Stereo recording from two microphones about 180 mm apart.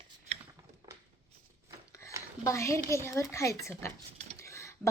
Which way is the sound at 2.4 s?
15° left (ahead or behind).